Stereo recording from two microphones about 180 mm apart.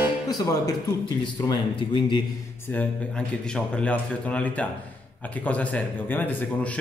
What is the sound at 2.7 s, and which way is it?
Speech, 5° left (ahead or behind).